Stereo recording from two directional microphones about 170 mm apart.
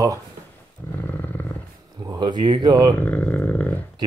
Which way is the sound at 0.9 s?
10° left (ahead or behind).